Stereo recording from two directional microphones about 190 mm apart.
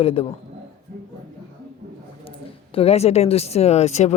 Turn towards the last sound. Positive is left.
turn(degrees=35)  # may be behind; listen again after turning